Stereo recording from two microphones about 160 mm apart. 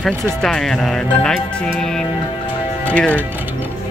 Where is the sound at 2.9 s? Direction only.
10° left (ahead or behind).